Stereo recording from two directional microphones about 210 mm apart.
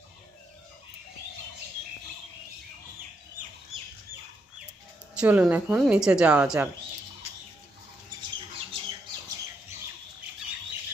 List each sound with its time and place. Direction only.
5.1 s speech: 5° right (ahead or behind)
8.7 s squawk: 25° right (ahead or behind)